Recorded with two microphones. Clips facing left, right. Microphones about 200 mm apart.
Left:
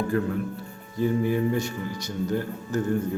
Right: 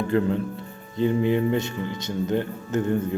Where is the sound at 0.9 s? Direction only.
20° right (ahead or behind).